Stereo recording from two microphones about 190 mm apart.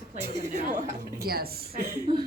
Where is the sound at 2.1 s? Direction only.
25° right (ahead or behind).